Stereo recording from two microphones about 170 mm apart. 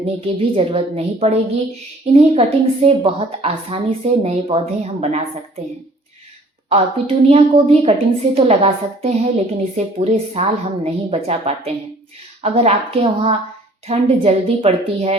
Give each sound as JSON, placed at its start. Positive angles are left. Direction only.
{"t": 0.0, "sound": "a woman's voice", "side_deg": -35}
{"t": 6.7, "sound": "a woman's voice", "side_deg": -35}